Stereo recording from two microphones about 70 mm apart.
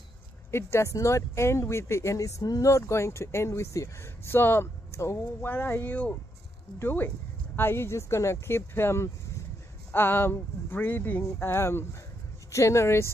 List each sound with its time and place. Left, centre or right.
0.5 s speech: left